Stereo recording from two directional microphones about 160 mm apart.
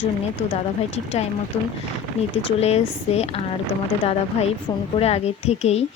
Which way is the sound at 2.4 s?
40° left (ahead or behind).